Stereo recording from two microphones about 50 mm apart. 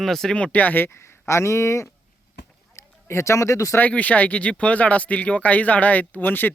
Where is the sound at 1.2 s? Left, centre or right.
Left.